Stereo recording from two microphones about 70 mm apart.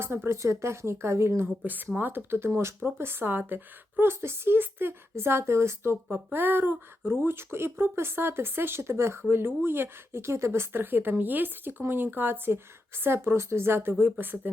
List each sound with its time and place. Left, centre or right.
0.0 s speech: right
1.6 s speech: right